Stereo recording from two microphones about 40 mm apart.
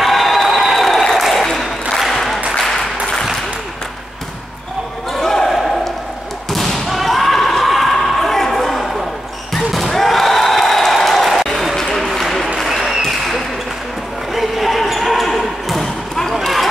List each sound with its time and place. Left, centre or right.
0.0 s crowd: centre
1.1 s applause: centre
5.2 s basketball bounce: centre
6.5 s thump: centre
9.5 s slam: centre
11.4 s a sound: centre
12.1 s applause: centre
12.6 s applause: centre
14.3 s basketball bounce: centre